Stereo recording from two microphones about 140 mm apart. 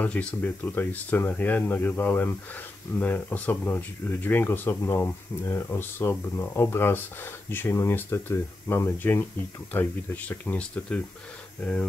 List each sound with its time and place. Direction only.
0.0 s speech: 10° left (ahead or behind)